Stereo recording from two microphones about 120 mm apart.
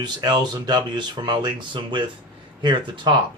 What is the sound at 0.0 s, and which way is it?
Speech, 35° right (ahead or behind).